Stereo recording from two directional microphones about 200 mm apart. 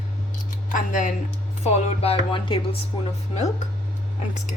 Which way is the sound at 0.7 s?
40° left (ahead or behind).